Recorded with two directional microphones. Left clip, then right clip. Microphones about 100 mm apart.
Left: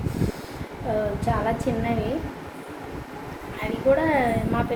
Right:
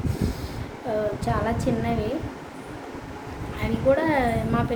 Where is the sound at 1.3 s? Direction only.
15° right (ahead or behind).